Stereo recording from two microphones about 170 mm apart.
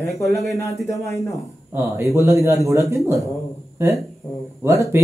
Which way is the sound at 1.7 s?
15° right (ahead or behind).